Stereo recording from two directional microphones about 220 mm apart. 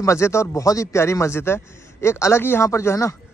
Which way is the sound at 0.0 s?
10° left (ahead or behind).